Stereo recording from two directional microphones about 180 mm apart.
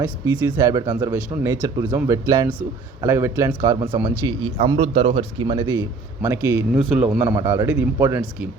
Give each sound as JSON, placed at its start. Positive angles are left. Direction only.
{"t": 0.5, "sound": "a man's voice", "side_deg": -20}
{"t": 6.2, "sound": "a man's voice", "side_deg": -15}
{"t": 6.7, "sound": "a man's voice", "side_deg": 0}